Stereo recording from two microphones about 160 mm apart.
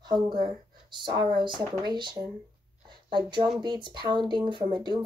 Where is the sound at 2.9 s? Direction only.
30° right (ahead or behind).